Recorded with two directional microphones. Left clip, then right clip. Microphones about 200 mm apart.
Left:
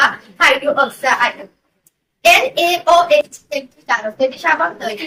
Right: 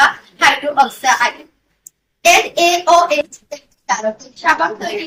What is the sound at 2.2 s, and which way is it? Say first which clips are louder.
A woman's voice: even; 15° left (ahead or behind).